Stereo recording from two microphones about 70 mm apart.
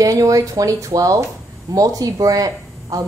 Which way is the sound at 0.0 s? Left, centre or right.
Right.